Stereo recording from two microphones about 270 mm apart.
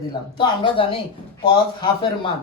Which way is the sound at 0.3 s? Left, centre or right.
Centre.